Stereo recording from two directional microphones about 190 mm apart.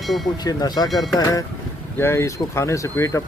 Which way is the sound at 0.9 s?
Centre (ahead or behind).